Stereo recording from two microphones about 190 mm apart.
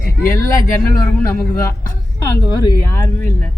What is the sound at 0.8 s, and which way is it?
A man's voice, 10° left (ahead or behind).